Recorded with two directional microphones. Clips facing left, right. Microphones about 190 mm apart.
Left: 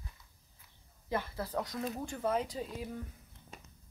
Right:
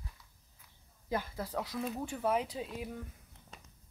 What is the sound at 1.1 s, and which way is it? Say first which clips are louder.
Speech: even; 10° right (ahead or behind).